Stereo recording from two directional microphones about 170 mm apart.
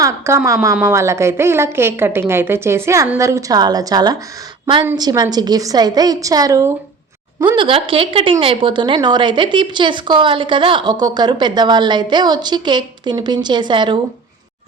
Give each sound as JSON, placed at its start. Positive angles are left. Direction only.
{"t": 0.0, "sound": "a woman's voice", "side_deg": -15}